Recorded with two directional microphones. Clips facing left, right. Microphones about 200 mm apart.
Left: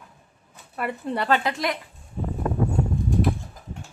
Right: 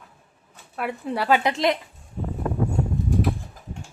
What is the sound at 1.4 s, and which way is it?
Speech, 25° right (ahead or behind).